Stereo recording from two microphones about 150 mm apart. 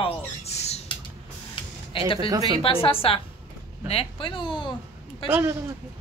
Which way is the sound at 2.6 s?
35° left (ahead or behind).